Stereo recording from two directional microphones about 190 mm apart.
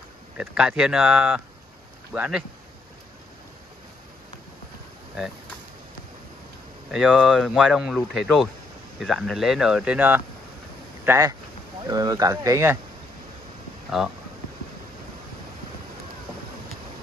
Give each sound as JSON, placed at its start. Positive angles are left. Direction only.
{"t": 0.4, "sound": "speech", "side_deg": -5}
{"t": 6.9, "sound": "speech", "side_deg": -5}
{"t": 13.8, "sound": "speech", "side_deg": 0}